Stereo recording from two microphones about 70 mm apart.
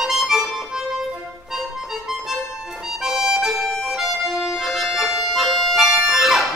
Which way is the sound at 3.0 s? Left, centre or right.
Centre.